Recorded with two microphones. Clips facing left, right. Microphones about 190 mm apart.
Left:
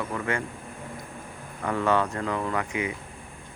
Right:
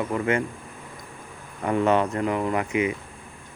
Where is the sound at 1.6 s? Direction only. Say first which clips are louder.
Right 3 dB; 20° right (ahead or behind).